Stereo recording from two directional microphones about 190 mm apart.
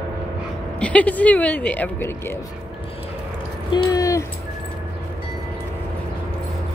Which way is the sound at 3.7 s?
20° left (ahead or behind).